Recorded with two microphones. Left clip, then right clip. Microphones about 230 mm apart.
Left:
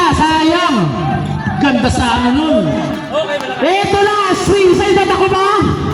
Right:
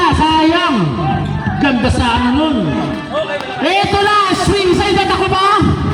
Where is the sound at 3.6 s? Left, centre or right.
Right.